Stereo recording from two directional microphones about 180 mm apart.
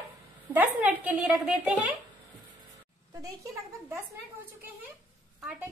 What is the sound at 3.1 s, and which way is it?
Speech, 20° right (ahead or behind).